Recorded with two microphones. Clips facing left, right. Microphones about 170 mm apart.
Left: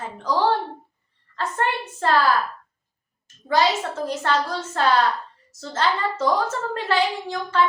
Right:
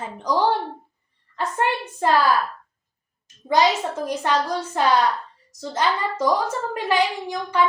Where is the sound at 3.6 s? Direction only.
20° right (ahead or behind).